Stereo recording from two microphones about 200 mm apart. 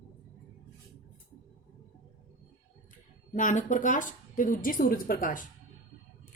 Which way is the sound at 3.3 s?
40° left (ahead or behind).